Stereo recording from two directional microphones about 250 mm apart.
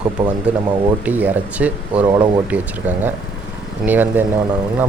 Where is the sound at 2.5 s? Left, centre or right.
Centre.